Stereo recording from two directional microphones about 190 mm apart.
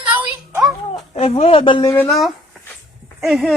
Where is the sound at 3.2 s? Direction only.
Centre (ahead or behind).